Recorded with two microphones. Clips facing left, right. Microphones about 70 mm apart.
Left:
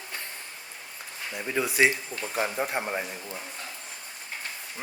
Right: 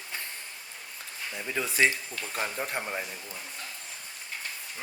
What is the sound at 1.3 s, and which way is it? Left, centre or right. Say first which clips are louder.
Speech: left 4 dB; centre.